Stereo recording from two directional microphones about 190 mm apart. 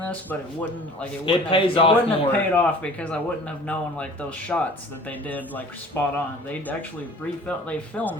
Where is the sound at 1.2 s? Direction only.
30° left (ahead or behind).